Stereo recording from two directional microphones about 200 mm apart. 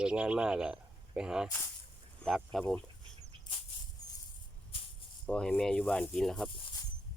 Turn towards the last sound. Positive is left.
turn(degrees=0)  # may be behind; listen again after turning